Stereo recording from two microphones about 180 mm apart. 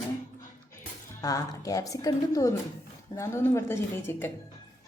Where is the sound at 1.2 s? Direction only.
20° left (ahead or behind).